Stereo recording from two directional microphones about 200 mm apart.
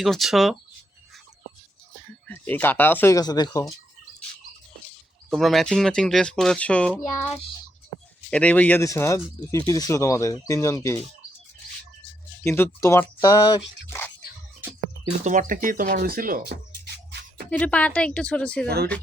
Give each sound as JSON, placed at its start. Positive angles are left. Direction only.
{"t": 0.0, "sound": "speech", "side_deg": 0}
{"t": 2.2, "sound": "speech", "side_deg": 10}
{"t": 5.3, "sound": "speech", "side_deg": 0}
{"t": 8.3, "sound": "speech", "side_deg": 5}
{"t": 12.4, "sound": "speech", "side_deg": 10}
{"t": 15.2, "sound": "speech", "side_deg": -40}
{"t": 17.5, "sound": "speech", "side_deg": 5}